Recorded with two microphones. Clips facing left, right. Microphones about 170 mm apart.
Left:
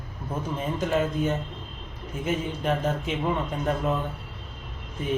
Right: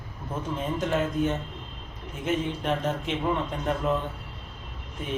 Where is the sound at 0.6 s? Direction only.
Centre (ahead or behind).